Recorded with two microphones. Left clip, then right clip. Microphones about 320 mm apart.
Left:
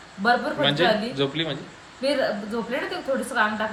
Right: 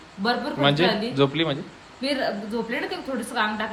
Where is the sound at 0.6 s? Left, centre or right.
Centre.